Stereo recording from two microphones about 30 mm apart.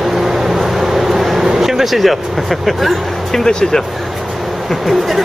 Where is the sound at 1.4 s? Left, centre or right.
Centre.